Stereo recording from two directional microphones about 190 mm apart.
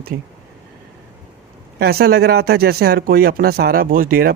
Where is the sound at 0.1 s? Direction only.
60° right (ahead or behind).